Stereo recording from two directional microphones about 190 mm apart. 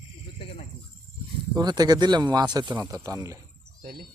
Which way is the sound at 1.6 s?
20° right (ahead or behind).